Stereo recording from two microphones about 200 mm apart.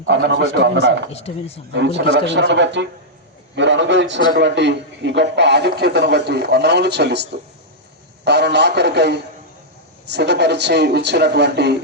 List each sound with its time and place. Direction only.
0.1 s speech: 60° right (ahead or behind)
1.1 s speech: 30° left (ahead or behind)
1.7 s speech: 60° right (ahead or behind)